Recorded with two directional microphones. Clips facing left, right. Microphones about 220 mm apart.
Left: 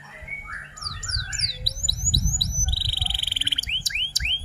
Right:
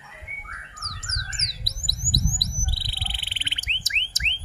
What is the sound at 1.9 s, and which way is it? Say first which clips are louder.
Bird: right 2 dB; 15° right (ahead or behind).